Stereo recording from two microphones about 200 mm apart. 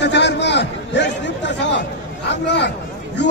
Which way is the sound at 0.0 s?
60° left (ahead or behind).